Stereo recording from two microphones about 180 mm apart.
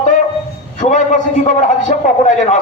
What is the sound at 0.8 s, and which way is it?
A man's voice, 40° left (ahead or behind).